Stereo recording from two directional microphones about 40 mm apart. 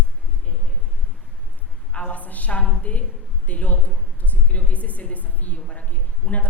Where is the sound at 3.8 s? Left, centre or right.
Left.